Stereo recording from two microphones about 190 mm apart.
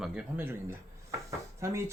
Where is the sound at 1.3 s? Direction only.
15° right (ahead or behind).